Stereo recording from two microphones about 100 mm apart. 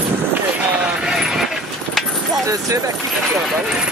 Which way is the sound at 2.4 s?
35° right (ahead or behind).